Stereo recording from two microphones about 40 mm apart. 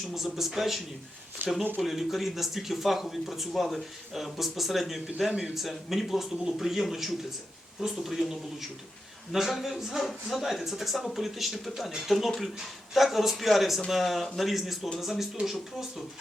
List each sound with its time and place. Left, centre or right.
0.3 s speech: centre
1.4 s speech: right
1.8 s speech: centre